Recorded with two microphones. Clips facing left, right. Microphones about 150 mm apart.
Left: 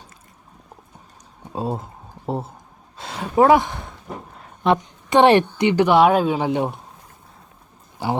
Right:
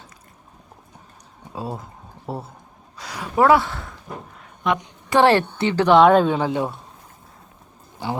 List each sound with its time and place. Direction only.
1.5 s speech: 25° left (ahead or behind)
4.4 s a sound: 30° left (ahead or behind)
5.0 s a woman's voice: 20° left (ahead or behind)
6.4 s speech: 20° left (ahead or behind)